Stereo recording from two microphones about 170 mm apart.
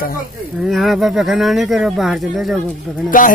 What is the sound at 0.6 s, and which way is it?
Speech, centre (ahead or behind).